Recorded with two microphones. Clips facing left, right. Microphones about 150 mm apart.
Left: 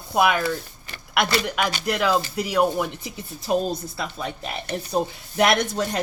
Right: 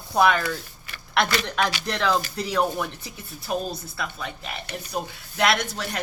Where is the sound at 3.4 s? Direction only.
25° left (ahead or behind).